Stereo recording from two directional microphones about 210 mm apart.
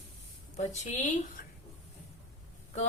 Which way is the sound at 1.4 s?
40° left (ahead or behind).